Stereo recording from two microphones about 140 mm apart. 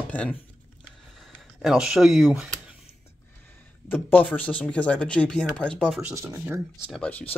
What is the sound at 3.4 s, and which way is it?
Speech, 15° left (ahead or behind).